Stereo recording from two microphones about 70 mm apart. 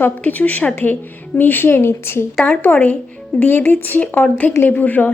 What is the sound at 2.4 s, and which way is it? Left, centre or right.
Speech, left.